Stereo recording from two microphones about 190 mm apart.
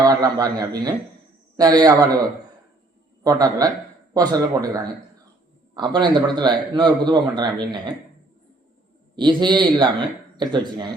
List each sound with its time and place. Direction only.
0.0 s a man's voice: 20° right (ahead or behind)
3.2 s a man's voice: 20° right (ahead or behind)
9.1 s a man's voice: 25° right (ahead or behind)